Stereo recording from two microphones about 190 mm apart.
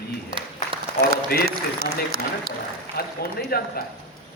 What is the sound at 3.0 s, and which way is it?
Speech, 55° left (ahead or behind).